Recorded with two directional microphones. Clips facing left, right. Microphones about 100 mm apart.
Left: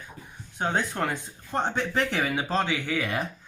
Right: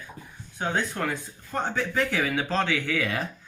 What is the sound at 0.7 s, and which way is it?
Speech, 25° left (ahead or behind).